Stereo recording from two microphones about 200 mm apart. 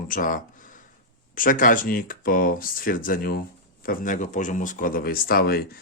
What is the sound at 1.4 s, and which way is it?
Speech, 45° left (ahead or behind).